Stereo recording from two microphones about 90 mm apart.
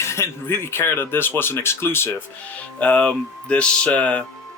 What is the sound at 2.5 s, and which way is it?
Speech, 15° left (ahead or behind).